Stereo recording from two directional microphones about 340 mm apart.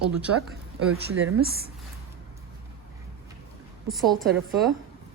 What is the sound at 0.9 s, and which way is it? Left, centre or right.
Speech, right.